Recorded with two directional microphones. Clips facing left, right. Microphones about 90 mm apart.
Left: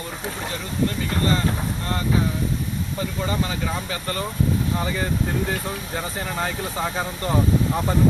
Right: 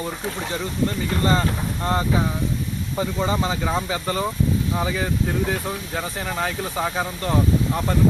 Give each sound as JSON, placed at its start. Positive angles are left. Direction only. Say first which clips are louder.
{"t": 1.2, "sound": "speech", "louder": "right 1 dB", "side_deg": -30}